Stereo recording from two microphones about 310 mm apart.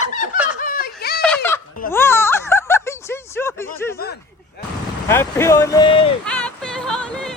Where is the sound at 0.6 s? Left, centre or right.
Left.